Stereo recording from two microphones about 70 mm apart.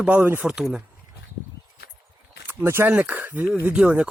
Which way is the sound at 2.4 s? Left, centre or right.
Right.